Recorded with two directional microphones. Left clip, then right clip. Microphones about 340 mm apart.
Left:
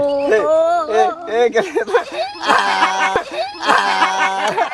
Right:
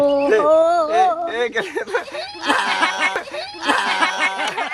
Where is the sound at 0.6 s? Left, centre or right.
Centre.